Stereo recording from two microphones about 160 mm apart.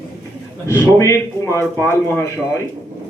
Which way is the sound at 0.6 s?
20° left (ahead or behind).